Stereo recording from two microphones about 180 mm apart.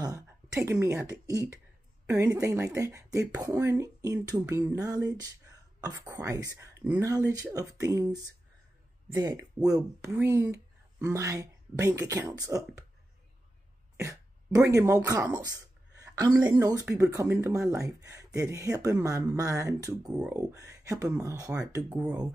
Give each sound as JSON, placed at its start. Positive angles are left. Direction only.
{"t": 0.0, "sound": "speech", "side_deg": -20}
{"t": 6.8, "sound": "speech", "side_deg": -5}
{"t": 7.1, "sound": "speech", "side_deg": -20}
{"t": 13.9, "sound": "speech", "side_deg": -15}
{"t": 16.0, "sound": "a sound", "side_deg": -20}
{"t": 16.4, "sound": "speech", "side_deg": -20}